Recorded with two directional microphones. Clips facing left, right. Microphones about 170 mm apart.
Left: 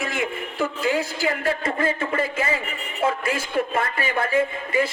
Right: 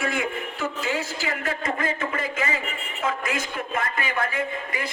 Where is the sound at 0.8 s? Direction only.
35° left (ahead or behind).